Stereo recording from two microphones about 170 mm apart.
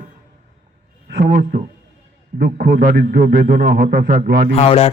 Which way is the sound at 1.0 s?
75° right (ahead or behind).